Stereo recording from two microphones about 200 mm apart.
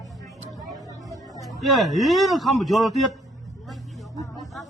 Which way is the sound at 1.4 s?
Centre (ahead or behind).